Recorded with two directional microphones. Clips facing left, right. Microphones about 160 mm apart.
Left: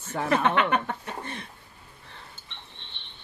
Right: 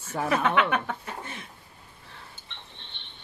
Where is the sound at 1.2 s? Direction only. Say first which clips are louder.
Left 3 dB; 5° right (ahead or behind).